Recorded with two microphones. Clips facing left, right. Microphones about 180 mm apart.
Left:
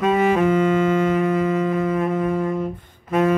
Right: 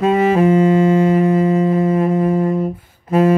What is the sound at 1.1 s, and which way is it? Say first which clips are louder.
Music: right 5 dB; 30° right (ahead or behind).